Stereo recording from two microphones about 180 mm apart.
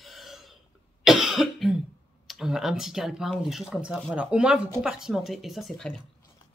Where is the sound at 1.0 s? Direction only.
Centre (ahead or behind).